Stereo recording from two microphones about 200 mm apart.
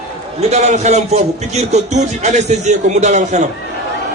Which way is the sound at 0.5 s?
35° right (ahead or behind).